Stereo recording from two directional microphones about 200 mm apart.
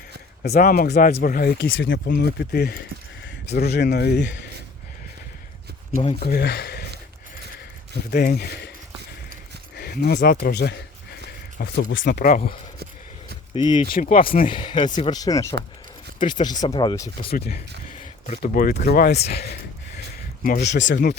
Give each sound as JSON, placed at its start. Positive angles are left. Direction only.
{"t": 0.4, "sound": "speech", "side_deg": 50}
{"t": 1.6, "sound": "speech", "side_deg": 65}
{"t": 6.0, "sound": "speech", "side_deg": 30}
{"t": 6.2, "sound": "speech", "side_deg": 50}
{"t": 8.1, "sound": "speech", "side_deg": 50}
{"t": 9.7, "sound": "speech", "side_deg": 50}
{"t": 10.4, "sound": "a sound", "side_deg": 55}
{"t": 11.8, "sound": "speech", "side_deg": 70}
{"t": 13.9, "sound": "speech", "side_deg": 45}
{"t": 14.4, "sound": "speech", "side_deg": 25}
{"t": 17.3, "sound": "speech", "side_deg": 50}
{"t": 18.9, "sound": "speech", "side_deg": 50}
{"t": 20.4, "sound": "speech", "side_deg": 50}
{"t": 20.7, "sound": "speech", "side_deg": 65}